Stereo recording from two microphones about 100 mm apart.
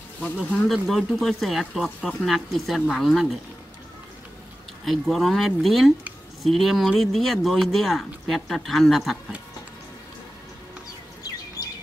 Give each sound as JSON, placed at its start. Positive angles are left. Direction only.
{"t": 0.4, "sound": "speech", "side_deg": 0}
{"t": 4.8, "sound": "speech", "side_deg": 0}
{"t": 11.6, "sound": "chirp", "side_deg": 40}